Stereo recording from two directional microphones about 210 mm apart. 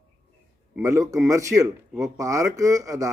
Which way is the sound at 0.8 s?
15° right (ahead or behind).